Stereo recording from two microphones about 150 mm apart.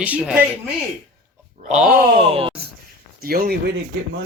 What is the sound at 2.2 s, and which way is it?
Speech, 35° right (ahead or behind).